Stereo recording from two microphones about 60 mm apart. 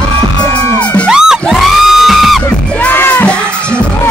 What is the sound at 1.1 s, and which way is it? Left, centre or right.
Music, centre.